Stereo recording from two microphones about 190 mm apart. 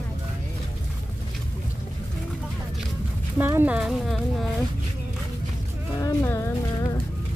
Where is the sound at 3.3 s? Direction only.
10° right (ahead or behind).